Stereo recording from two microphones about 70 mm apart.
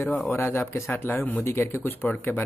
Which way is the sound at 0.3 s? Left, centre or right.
Left.